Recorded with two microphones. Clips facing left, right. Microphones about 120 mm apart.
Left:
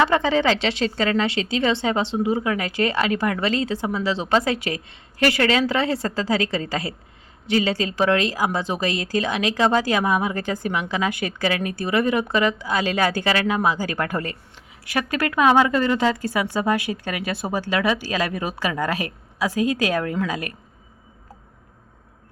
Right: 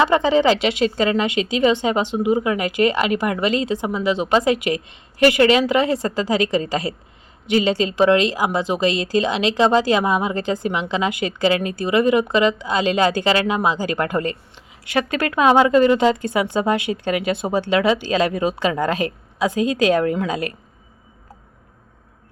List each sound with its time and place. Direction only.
0.0 s a woman's voice: 20° right (ahead or behind)